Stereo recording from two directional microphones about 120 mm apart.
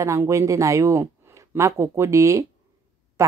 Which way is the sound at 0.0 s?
25° right (ahead or behind).